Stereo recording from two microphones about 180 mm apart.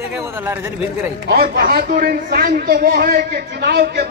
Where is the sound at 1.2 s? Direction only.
55° right (ahead or behind).